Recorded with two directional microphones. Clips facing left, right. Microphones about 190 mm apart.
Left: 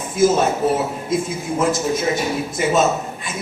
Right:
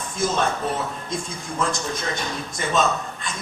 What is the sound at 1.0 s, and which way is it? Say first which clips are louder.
A man's voice: left 9 dB; 5° left (ahead or behind).